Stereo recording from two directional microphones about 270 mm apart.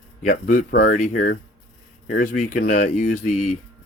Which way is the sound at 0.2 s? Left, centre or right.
Left.